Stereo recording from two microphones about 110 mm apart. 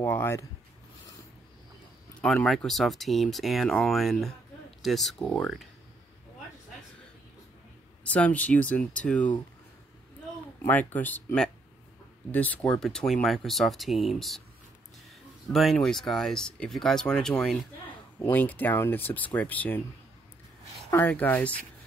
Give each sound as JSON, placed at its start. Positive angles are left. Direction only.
{"t": 0.0, "sound": "speech", "side_deg": 20}
{"t": 2.2, "sound": "speech", "side_deg": 0}
{"t": 8.0, "sound": "speech", "side_deg": 10}
{"t": 10.6, "sound": "speech", "side_deg": 15}
{"t": 15.5, "sound": "speech", "side_deg": 0}
{"t": 18.2, "sound": "speech", "side_deg": 15}
{"t": 20.9, "sound": "speech", "side_deg": 15}